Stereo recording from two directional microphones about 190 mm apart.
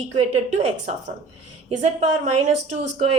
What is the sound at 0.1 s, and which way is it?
A woman's voice, 35° right (ahead or behind).